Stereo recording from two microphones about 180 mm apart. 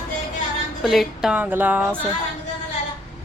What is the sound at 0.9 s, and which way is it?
Speech, centre (ahead or behind).